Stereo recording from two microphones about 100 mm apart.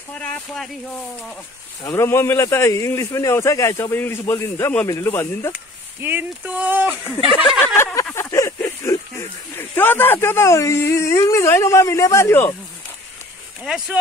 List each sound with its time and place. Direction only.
0.1 s speech: 15° left (ahead or behind)
1.8 s speech: 30° left (ahead or behind)
6.0 s speech: 15° right (ahead or behind)
7.6 s a sound: 25° left (ahead or behind)
9.6 s speech: 20° left (ahead or behind)
13.7 s speech: 5° right (ahead or behind)